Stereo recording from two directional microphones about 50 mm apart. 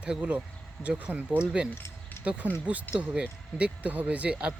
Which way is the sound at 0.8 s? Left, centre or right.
Left.